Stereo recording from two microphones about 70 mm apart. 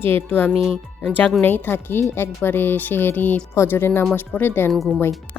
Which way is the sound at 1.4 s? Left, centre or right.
Left.